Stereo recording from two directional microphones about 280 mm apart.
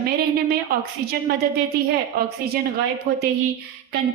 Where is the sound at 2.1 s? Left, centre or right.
Right.